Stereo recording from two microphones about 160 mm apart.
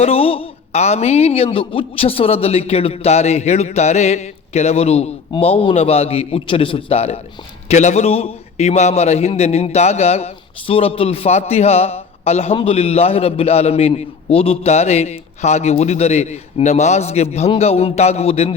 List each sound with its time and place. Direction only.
0.0 s a man's voice: 40° left (ahead or behind)